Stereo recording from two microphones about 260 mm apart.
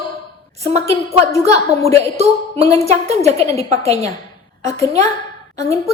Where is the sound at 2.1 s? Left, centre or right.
Right.